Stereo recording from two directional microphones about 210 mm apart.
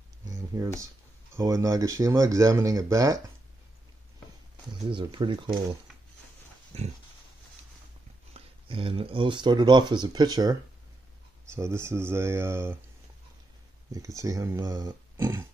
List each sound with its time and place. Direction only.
0.2 s a sound: 15° right (ahead or behind)
1.3 s speech: 15° right (ahead or behind)
4.8 s speech: 25° right (ahead or behind)
6.7 s pig: 30° right (ahead or behind)
8.3 s speech: 25° right (ahead or behind)
13.9 s speech: 15° right (ahead or behind)